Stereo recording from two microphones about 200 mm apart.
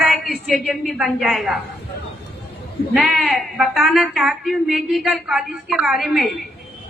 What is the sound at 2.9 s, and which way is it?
Speech, centre (ahead or behind).